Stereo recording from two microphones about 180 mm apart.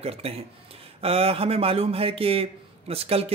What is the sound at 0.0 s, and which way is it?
Speech, 35° right (ahead or behind).